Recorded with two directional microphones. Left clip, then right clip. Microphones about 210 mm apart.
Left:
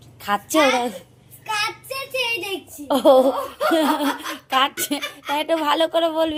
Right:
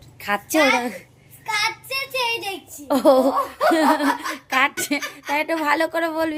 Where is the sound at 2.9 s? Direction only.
20° right (ahead or behind).